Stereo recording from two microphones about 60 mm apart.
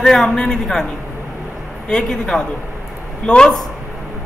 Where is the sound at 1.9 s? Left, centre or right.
Centre.